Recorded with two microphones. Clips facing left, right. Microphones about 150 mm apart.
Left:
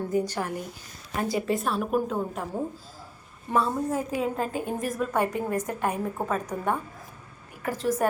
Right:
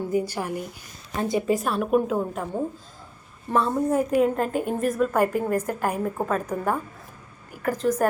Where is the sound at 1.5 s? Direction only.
Centre (ahead or behind).